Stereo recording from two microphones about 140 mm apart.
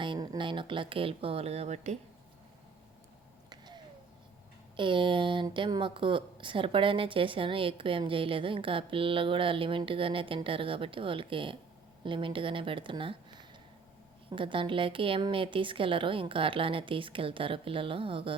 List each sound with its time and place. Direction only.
0.0 s a woman's voice: 30° right (ahead or behind); by 2.0 s 55° right (ahead or behind)
4.8 s a woman's voice: 35° right (ahead or behind)
14.3 s a woman's voice: 35° right (ahead or behind)